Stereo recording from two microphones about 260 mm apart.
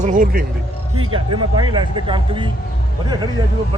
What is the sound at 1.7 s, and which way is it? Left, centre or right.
Speech, centre.